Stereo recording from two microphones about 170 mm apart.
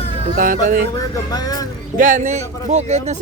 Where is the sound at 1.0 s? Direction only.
20° left (ahead or behind).